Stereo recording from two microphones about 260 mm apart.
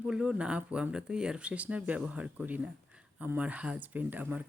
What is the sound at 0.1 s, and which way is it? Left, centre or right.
Speech, centre.